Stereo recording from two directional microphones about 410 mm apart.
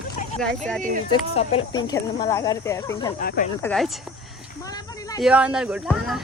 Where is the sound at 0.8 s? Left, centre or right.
Centre.